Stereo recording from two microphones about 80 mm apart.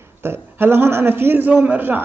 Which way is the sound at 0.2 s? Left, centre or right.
Right.